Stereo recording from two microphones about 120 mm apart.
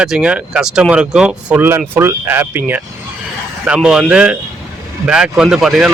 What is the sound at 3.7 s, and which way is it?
Speech, 5° right (ahead or behind).